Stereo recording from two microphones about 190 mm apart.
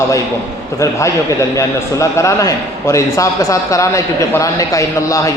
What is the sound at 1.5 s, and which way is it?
A man's voice, 15° left (ahead or behind).